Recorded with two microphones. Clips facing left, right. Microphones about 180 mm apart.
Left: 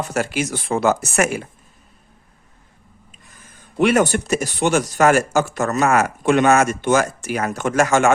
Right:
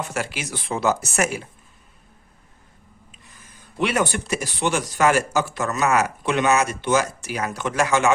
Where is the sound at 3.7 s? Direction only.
45° left (ahead or behind).